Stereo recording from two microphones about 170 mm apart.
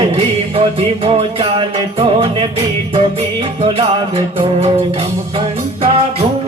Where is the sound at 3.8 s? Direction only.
35° right (ahead or behind).